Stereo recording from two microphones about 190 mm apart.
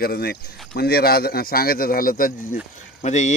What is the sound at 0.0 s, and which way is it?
Speech, 55° left (ahead or behind).